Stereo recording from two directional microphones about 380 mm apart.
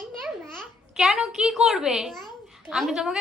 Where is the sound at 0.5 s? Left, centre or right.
Centre.